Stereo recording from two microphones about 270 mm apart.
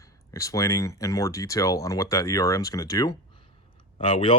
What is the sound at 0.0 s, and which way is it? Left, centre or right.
Speech, centre.